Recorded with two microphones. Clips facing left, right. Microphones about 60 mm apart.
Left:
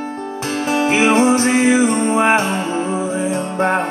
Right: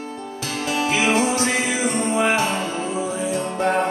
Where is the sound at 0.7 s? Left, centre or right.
Left.